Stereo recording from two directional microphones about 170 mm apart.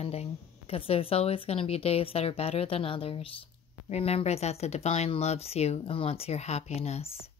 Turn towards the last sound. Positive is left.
turn(degrees=35)  # may be behind; listen again after turning